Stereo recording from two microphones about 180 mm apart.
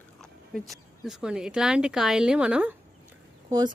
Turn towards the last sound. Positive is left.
turn(degrees=-20)  # may be behind; listen again after turning